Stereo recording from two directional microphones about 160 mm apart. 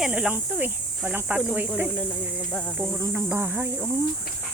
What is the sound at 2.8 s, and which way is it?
Speech, 15° right (ahead or behind).